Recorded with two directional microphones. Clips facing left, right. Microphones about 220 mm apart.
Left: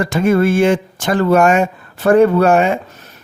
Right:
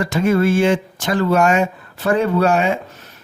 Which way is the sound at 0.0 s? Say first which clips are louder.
Left 3 dB; 50° left (ahead or behind).